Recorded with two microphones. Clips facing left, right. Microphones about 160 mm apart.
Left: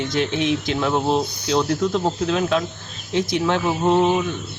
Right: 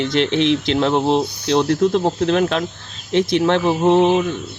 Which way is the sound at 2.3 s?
65° right (ahead or behind).